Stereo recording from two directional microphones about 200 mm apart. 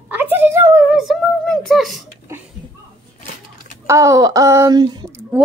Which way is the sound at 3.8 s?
15° right (ahead or behind).